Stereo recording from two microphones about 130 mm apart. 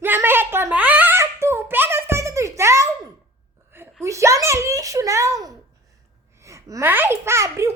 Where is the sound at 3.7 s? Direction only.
20° right (ahead or behind).